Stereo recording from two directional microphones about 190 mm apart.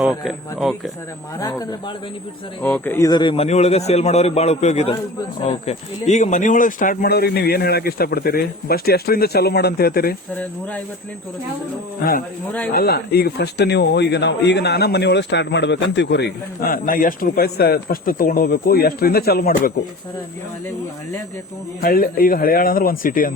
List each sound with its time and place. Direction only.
0.0 s speech: centre (ahead or behind)
1.4 s a man's voice: 20° left (ahead or behind); by 10.2 s 55° left (ahead or behind)
12.0 s speech: 55° left (ahead or behind)
21.8 s speech: 50° left (ahead or behind)